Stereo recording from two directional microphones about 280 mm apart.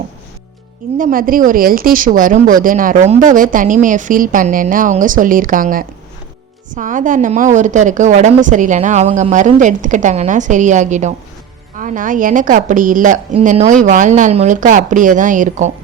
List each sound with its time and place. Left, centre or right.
0.9 s a woman's voice: right